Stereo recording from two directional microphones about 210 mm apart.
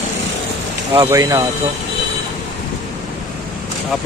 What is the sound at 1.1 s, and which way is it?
Speech, 15° right (ahead or behind).